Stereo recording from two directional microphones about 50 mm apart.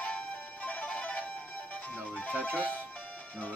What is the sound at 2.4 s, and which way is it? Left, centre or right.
Music, left.